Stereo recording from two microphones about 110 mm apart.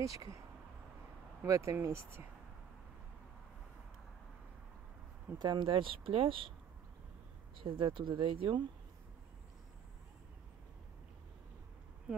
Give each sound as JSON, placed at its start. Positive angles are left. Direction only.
{"t": 0.0, "sound": "speech", "side_deg": -30}
{"t": 1.4, "sound": "speech", "side_deg": -25}
{"t": 5.4, "sound": "speech", "side_deg": -40}
{"t": 5.7, "sound": "speech", "side_deg": -55}
{"t": 7.5, "sound": "speech", "side_deg": -50}